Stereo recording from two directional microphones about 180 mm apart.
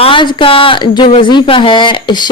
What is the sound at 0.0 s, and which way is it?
Speech, 25° left (ahead or behind).